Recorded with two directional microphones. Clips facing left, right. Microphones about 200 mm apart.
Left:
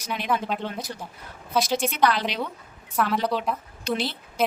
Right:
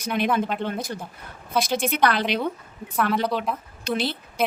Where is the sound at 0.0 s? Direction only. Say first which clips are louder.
Right 7 dB; 55° right (ahead or behind).